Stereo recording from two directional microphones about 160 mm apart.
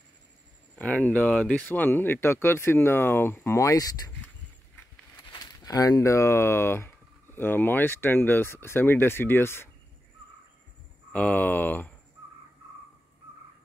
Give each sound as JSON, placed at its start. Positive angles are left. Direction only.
{"t": 0.7, "sound": "speech", "side_deg": 5}
{"t": 5.3, "sound": "speech", "side_deg": 25}
{"t": 11.1, "sound": "speech", "side_deg": 10}